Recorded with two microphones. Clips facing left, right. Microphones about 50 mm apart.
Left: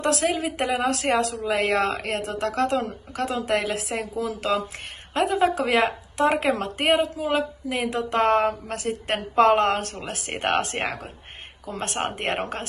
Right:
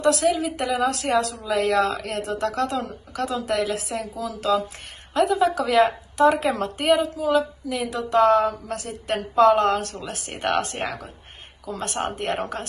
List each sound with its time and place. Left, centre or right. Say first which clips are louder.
0.0 s a woman's voice: right 3 dB; left